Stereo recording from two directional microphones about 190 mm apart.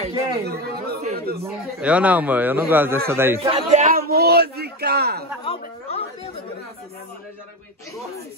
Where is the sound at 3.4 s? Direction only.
35° right (ahead or behind); by 5.2 s 55° right (ahead or behind).